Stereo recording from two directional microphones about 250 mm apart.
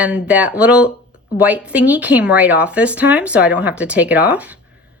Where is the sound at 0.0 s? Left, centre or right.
Centre.